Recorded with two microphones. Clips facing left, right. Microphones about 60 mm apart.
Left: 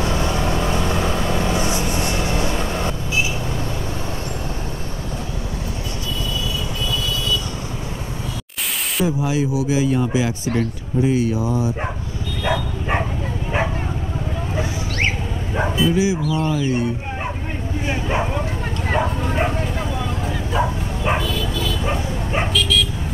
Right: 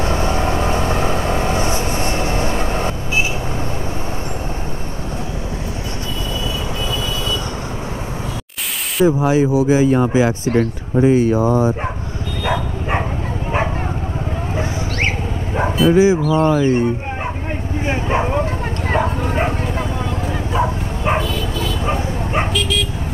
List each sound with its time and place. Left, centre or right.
0.0 s vehicle: right
9.0 s speech: right
15.9 s speech: right
17.8 s speech: right
20.5 s bow-wow: centre
21.2 s bow-wow: right
21.8 s bow-wow: centre
22.4 s dog: right